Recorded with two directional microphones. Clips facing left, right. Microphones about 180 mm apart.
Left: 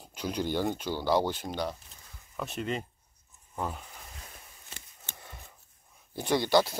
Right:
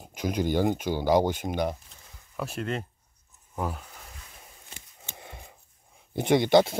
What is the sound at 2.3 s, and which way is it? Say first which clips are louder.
Speech: right 2 dB; 5° right (ahead or behind).